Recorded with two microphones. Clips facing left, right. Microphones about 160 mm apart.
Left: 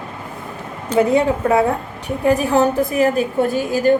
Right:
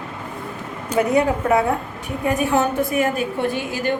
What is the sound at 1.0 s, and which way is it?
A woman's voice, 25° left (ahead or behind).